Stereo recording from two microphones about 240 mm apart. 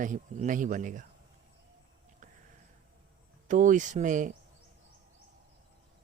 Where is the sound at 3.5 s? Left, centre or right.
Right.